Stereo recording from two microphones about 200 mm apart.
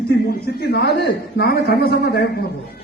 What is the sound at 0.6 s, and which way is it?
A man's voice, 55° left (ahead or behind).